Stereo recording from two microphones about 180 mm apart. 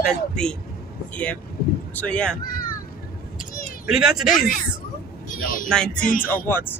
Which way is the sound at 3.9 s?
Centre (ahead or behind).